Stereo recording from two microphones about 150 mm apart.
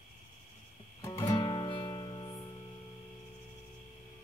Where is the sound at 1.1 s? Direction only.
35° left (ahead or behind).